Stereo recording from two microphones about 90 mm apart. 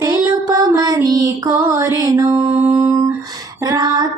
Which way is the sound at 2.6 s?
25° right (ahead or behind).